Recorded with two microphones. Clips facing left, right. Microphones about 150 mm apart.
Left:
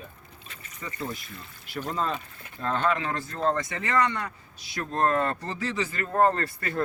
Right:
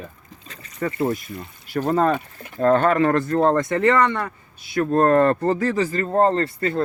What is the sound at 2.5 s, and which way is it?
Speech, 50° right (ahead or behind).